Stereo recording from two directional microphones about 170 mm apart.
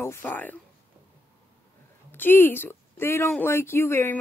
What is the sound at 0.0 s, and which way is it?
Speech, 10° left (ahead or behind).